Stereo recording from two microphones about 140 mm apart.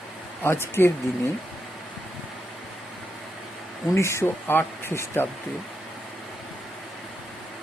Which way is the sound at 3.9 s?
20° left (ahead or behind).